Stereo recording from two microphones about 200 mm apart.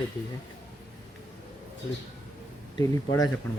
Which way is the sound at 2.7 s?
15° left (ahead or behind).